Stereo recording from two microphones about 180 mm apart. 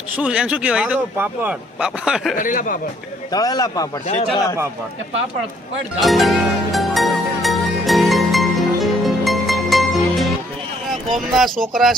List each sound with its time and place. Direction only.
0.2 s speech: 5° right (ahead or behind)
2.3 s speech: 45° left (ahead or behind)
3.3 s a man's voice: 20° left (ahead or behind)
6.0 s music: centre (ahead or behind)
11.3 s speech: centre (ahead or behind)